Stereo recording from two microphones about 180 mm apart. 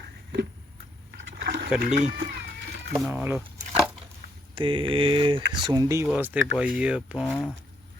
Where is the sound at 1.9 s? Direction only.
40° right (ahead or behind).